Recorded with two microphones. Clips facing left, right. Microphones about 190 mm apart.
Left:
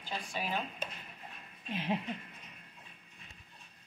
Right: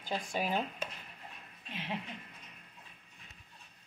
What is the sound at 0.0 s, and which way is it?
Speech, 45° right (ahead or behind).